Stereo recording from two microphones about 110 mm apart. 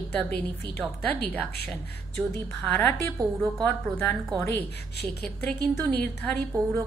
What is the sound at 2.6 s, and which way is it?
Speech, 20° left (ahead or behind).